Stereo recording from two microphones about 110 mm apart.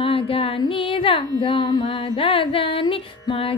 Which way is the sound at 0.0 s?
60° left (ahead or behind).